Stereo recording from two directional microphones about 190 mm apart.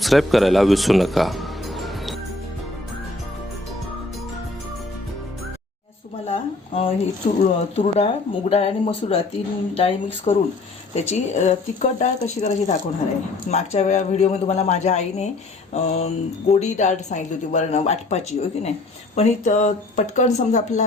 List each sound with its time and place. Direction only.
0.0 s speech: centre (ahead or behind)
6.2 s speech: 35° left (ahead or behind)